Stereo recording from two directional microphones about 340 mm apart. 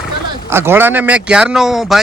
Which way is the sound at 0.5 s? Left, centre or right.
Centre.